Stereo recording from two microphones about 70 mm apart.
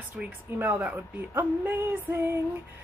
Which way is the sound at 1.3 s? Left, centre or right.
Right.